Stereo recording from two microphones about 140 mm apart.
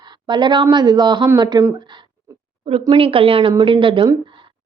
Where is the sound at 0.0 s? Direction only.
30° right (ahead or behind).